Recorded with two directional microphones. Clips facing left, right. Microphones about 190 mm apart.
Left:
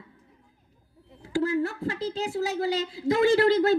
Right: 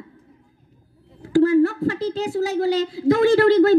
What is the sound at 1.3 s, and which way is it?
Speech, 55° right (ahead or behind).